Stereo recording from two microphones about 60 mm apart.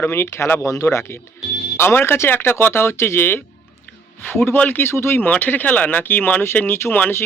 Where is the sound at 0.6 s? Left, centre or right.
Left.